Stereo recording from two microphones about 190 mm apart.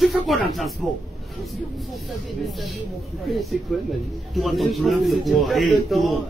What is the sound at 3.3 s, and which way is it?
Speech, centre (ahead or behind).